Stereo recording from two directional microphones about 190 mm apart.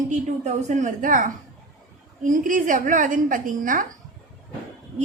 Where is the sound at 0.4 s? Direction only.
40° right (ahead or behind).